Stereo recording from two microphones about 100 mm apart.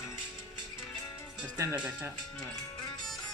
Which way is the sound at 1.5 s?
35° right (ahead or behind).